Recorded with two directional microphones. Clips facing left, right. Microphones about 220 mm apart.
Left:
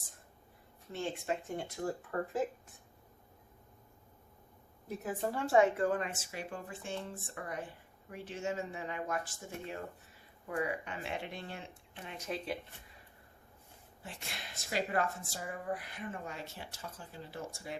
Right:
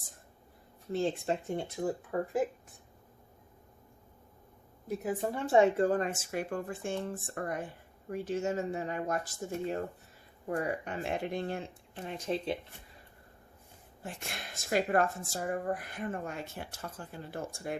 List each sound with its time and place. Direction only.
0.9 s speech: 35° right (ahead or behind)
2.0 s speech: 15° right (ahead or behind)
5.0 s speech: 20° right (ahead or behind)
14.0 s speech: 50° right (ahead or behind)